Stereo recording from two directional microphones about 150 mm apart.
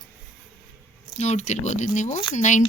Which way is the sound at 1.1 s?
50° left (ahead or behind).